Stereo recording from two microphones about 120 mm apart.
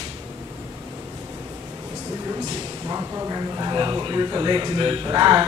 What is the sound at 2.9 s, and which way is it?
Speech, 25° right (ahead or behind).